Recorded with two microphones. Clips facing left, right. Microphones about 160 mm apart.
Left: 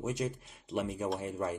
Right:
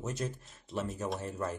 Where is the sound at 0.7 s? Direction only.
Centre (ahead or behind).